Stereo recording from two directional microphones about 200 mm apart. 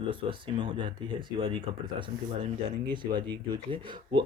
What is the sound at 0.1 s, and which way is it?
Speech, 25° right (ahead or behind).